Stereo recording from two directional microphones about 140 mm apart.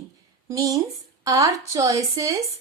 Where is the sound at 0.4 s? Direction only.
25° right (ahead or behind).